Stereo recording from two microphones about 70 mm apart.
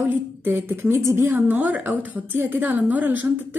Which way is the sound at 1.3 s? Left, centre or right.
Right.